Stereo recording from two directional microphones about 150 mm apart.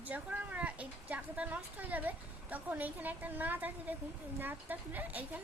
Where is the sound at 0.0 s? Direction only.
10° right (ahead or behind).